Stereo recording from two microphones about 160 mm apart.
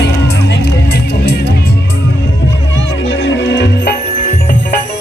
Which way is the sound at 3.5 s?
90° left.